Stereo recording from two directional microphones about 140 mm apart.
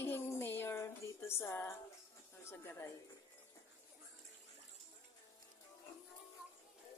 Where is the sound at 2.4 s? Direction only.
20° left (ahead or behind).